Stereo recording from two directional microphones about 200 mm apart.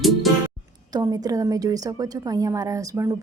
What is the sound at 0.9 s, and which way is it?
A woman's voice, 20° right (ahead or behind).